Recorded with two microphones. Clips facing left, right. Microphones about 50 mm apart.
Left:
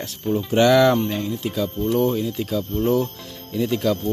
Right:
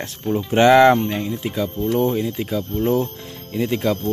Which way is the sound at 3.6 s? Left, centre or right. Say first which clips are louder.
Right 1 dB; right.